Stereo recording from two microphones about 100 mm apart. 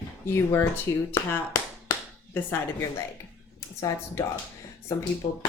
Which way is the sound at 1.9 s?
35° left (ahead or behind).